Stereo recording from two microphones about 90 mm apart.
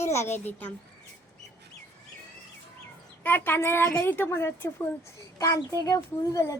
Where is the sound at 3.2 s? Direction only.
25° left (ahead or behind).